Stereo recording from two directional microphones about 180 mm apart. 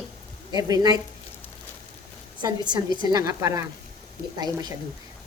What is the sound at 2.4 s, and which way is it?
A woman's voice, 25° right (ahead or behind).